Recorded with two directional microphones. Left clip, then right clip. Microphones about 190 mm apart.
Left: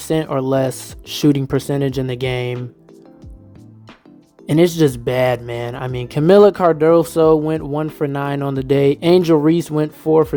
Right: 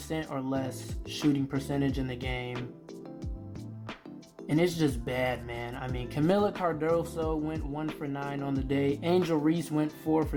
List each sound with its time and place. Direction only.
0.0 s speech: 60° left (ahead or behind)
4.4 s speech: 55° left (ahead or behind)